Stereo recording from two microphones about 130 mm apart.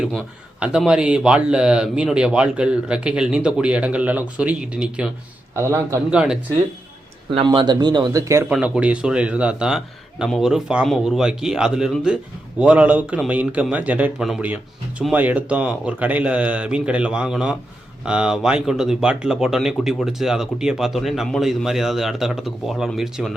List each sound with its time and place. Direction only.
0.6 s a man's voice: 5° right (ahead or behind)
5.5 s a man's voice: 20° right (ahead or behind)
6.1 s a man's voice: 5° right (ahead or behind)
7.4 s speech: 35° right (ahead or behind)
8.4 s a man's voice: 10° right (ahead or behind)